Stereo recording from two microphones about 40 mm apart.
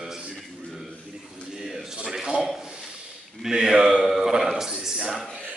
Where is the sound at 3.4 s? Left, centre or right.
Centre.